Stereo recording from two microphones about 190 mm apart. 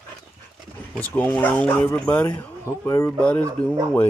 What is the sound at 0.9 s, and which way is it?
Speech, 10° left (ahead or behind).